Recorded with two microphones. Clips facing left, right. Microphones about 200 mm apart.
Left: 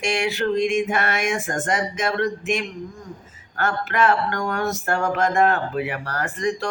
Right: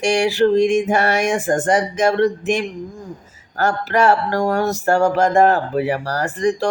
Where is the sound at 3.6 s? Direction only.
35° right (ahead or behind).